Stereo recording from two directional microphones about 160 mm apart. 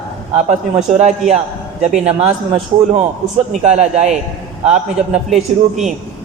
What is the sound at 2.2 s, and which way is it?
A man's voice, 40° right (ahead or behind).